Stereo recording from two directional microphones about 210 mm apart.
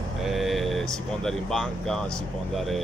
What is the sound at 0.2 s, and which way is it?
Speech, centre (ahead or behind).